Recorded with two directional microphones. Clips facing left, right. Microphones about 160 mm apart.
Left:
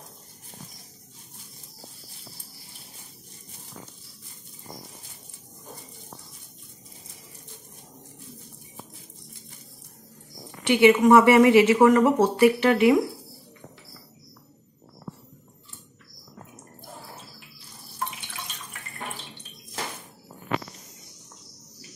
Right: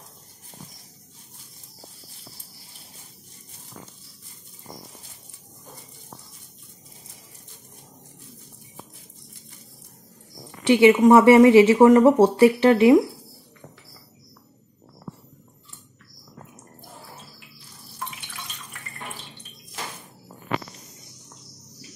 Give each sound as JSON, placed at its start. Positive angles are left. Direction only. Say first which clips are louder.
{"t": 10.7, "sound": "speech", "louder": "right 2 dB", "side_deg": -30}